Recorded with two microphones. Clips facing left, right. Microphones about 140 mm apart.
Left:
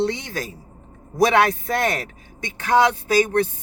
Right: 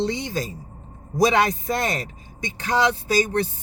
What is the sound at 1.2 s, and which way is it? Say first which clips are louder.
A man's voice: left 2 dB; 60° left (ahead or behind).